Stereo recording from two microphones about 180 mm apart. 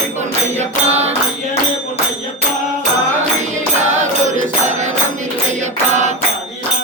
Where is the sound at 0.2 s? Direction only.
40° right (ahead or behind).